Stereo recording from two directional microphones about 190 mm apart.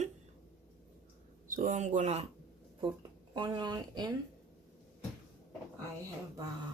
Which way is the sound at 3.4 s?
25° right (ahead or behind).